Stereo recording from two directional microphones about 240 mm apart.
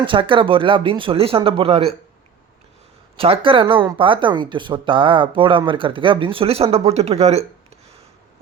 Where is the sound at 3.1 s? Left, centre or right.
Right.